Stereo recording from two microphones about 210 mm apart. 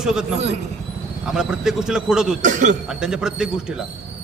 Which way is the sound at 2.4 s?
35° right (ahead or behind).